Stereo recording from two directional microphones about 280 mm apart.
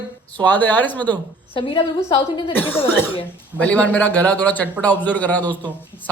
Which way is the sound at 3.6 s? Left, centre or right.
Centre.